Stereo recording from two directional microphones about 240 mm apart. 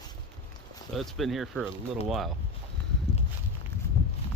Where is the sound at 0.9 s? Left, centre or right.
Centre.